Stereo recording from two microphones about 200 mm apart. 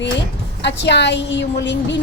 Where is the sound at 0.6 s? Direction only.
60° left (ahead or behind).